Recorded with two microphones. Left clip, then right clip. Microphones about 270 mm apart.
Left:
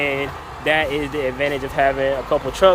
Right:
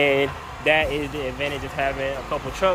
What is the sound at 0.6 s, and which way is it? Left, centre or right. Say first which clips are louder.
Speech: left 1 dB; centre.